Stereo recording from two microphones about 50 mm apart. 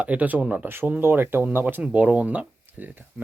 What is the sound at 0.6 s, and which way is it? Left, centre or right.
Speech, right.